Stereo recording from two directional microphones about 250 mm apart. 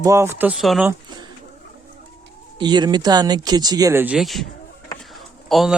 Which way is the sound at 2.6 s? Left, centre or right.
Centre.